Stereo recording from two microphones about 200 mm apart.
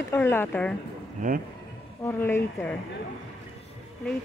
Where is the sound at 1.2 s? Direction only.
40° right (ahead or behind).